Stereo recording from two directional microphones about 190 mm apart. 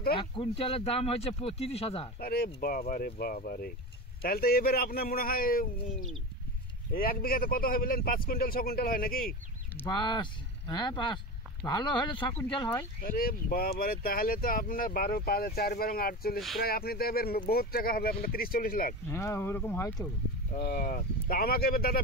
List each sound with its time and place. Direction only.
0.1 s speech: 25° left (ahead or behind)
2.1 s speech: 55° left (ahead or behind)
9.8 s speech: 25° left (ahead or behind)
13.0 s speech: 50° left (ahead or behind)
19.0 s speech: 15° left (ahead or behind)
20.5 s speech: 60° left (ahead or behind)